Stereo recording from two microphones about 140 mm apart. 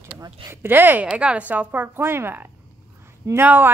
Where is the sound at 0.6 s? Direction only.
15° right (ahead or behind).